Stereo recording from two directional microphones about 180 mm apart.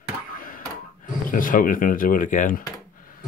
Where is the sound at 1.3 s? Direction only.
50° left (ahead or behind).